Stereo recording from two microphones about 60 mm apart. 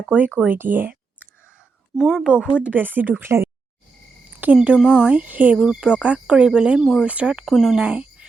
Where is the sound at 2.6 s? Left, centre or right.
Right.